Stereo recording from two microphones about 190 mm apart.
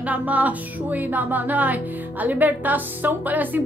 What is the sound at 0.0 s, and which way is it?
A woman's voice, 10° right (ahead or behind).